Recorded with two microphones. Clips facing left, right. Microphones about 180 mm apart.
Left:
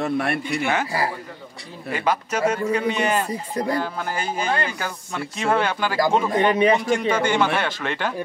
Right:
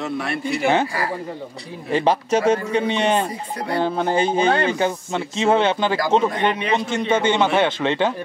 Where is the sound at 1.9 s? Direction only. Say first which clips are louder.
Right 5 dB; 30° right (ahead or behind).